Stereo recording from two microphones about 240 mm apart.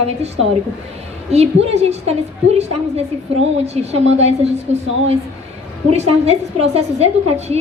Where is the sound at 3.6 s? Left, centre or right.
Right.